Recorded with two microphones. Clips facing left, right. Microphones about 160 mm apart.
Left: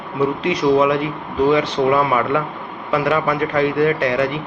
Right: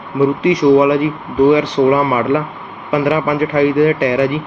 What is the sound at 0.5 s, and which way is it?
Speech, 10° right (ahead or behind).